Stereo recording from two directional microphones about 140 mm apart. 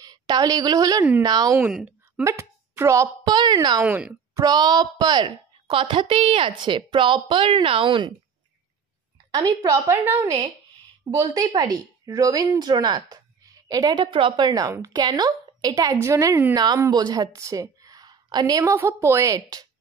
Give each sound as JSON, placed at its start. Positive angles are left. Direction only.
{"t": 0.0, "sound": "a woman's voice", "side_deg": -30}
{"t": 1.6, "sound": "speech", "side_deg": -5}
{"t": 2.2, "sound": "speech", "side_deg": -20}
{"t": 3.8, "sound": "speech", "side_deg": -10}
{"t": 4.4, "sound": "a woman's voice", "side_deg": -30}
{"t": 9.4, "sound": "a woman's voice", "side_deg": -25}